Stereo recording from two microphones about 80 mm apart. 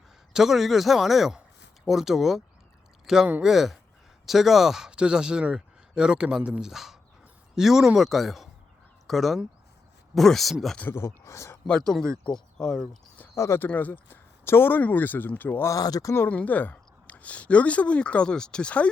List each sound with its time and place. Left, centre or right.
0.3 s speech: centre
10.9 s speech: left
11.9 s speech: centre
13.3 s speech: left
13.6 s speech: left
15.7 s speech: left
16.3 s speech: centre